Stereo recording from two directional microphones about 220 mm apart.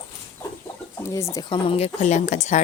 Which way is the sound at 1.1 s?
15° left (ahead or behind).